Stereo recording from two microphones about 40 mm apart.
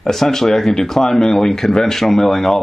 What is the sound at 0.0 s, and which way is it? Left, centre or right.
Speech, centre.